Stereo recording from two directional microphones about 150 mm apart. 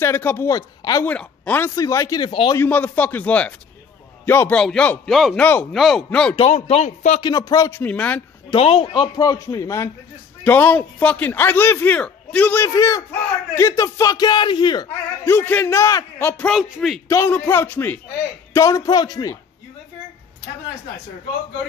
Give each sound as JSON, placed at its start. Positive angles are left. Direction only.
{"t": 0.0, "sound": "speech", "side_deg": 15}
{"t": 1.0, "sound": "a man's voice", "side_deg": 10}
{"t": 1.8, "sound": "speech", "side_deg": 20}
{"t": 2.5, "sound": "a man's voice", "side_deg": 10}
{"t": 6.3, "sound": "speech", "side_deg": 45}
{"t": 7.2, "sound": "speech", "side_deg": 25}
{"t": 7.8, "sound": "a man's voice", "side_deg": 10}
{"t": 8.5, "sound": "a man's voice", "side_deg": 40}
{"t": 15.2, "sound": "a man's voice", "side_deg": 15}
{"t": 16.4, "sound": "speech", "side_deg": -5}
{"t": 17.1, "sound": "a man's voice", "side_deg": 15}